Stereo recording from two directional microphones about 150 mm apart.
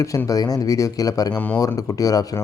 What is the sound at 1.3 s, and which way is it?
Speech, 10° left (ahead or behind).